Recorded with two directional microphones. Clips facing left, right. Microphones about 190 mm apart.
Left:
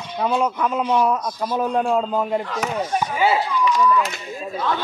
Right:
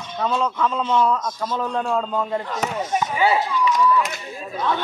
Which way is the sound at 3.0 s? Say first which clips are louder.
Even; 20° right (ahead or behind).